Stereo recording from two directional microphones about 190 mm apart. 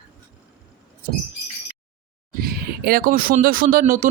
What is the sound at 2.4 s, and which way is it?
Speech, 50° right (ahead or behind).